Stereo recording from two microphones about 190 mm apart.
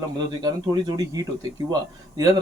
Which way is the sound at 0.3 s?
20° right (ahead or behind).